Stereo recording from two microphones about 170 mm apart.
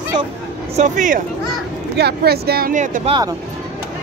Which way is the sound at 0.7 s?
45° right (ahead or behind).